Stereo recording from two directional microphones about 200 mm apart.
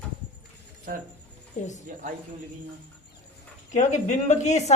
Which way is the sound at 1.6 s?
35° left (ahead or behind).